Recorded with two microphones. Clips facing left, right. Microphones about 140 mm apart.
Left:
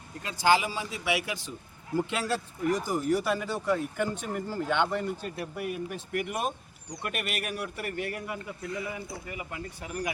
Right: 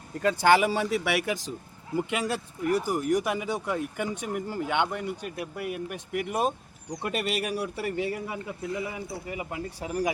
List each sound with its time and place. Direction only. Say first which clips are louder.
0.2 s speech: right 4 dB; 55° right (ahead or behind)
1.2 s speech: right 6 dB; 40° right (ahead or behind)
2.1 s speech: right 1 dB; 15° right (ahead or behind)
6.1 s speech: right 4 dB; 30° right (ahead or behind)